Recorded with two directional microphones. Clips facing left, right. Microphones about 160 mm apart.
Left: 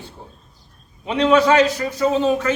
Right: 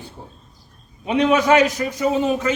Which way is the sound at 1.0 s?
10° right (ahead or behind).